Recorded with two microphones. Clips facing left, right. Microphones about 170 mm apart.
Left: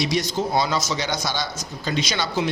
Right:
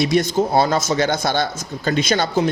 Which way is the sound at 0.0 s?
55° right (ahead or behind).